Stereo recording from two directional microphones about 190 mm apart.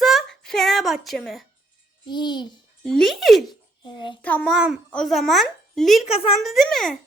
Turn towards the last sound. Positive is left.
turn(degrees=0)  # may be behind; listen again after turning